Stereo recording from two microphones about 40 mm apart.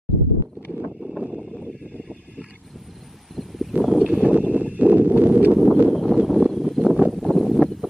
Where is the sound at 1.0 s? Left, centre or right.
Centre.